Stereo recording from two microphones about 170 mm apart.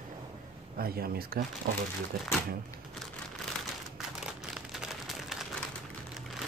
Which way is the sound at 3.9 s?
Centre (ahead or behind).